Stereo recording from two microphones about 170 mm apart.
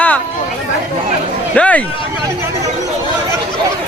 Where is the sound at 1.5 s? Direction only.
10° left (ahead or behind).